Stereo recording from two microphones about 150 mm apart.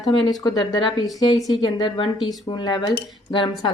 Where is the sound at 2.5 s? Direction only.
30° left (ahead or behind).